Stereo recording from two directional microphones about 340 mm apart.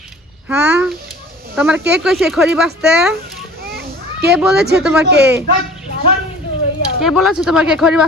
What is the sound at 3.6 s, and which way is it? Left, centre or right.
Children playing, right.